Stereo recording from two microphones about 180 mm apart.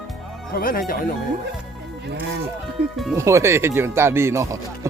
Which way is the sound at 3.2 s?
15° right (ahead or behind).